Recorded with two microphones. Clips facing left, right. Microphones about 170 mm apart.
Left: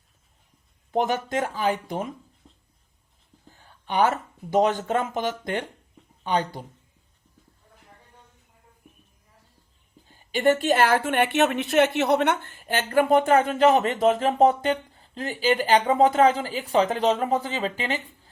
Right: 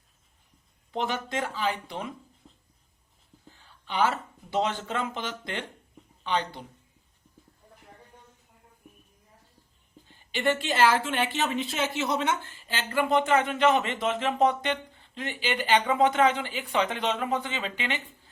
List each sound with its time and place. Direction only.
0.9 s a woman's voice: 45° left (ahead or behind)
2.4 s writing: 5° right (ahead or behind)
3.5 s speech: 45° left (ahead or behind)
10.1 s a woman's voice: 40° left (ahead or behind)